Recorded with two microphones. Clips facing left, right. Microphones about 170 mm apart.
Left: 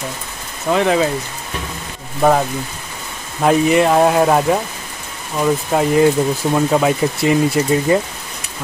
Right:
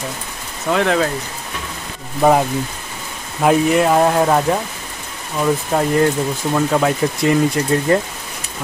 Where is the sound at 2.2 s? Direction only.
5° right (ahead or behind).